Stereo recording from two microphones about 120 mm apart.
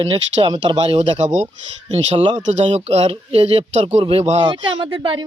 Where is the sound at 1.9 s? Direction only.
60° right (ahead or behind).